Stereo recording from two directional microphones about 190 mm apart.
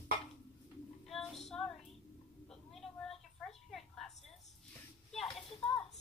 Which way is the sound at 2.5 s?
Centre (ahead or behind).